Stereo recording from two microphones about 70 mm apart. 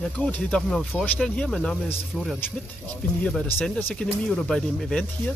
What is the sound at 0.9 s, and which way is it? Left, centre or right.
Speech, centre.